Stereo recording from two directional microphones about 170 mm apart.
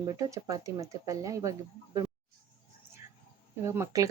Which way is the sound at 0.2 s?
20° right (ahead or behind).